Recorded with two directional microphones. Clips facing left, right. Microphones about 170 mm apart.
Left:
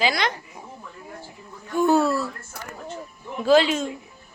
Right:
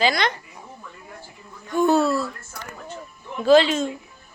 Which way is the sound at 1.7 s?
10° left (ahead or behind).